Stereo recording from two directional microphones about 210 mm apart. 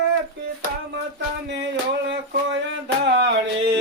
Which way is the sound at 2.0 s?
55° right (ahead or behind).